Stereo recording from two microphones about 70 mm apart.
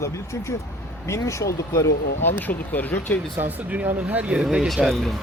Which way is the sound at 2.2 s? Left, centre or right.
Left.